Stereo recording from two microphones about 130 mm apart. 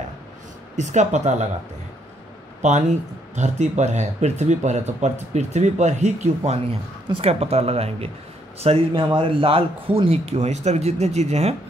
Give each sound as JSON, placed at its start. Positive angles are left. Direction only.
{"t": 0.7, "sound": "speech", "side_deg": -65}
{"t": 2.6, "sound": "speech", "side_deg": -65}